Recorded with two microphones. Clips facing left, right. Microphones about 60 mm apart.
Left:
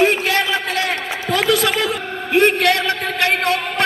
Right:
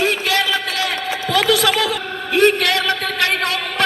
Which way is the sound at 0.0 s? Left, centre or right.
Left.